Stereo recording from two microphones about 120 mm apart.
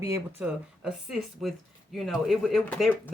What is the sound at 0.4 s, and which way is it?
Speech, 5° right (ahead or behind).